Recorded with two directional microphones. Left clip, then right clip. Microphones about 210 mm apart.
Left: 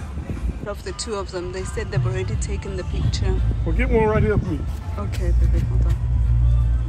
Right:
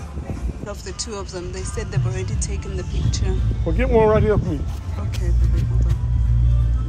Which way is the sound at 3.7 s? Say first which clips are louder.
Right 4 dB; 50° right (ahead or behind).